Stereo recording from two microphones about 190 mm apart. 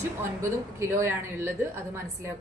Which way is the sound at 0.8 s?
15° right (ahead or behind).